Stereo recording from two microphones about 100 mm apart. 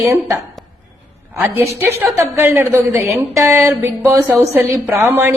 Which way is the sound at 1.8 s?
20° right (ahead or behind).